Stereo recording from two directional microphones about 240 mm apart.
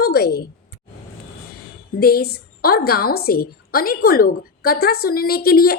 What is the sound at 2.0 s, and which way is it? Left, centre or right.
A woman's voice, left.